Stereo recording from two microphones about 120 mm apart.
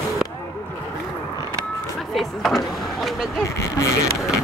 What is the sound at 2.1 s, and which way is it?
Power windows, centre (ahead or behind).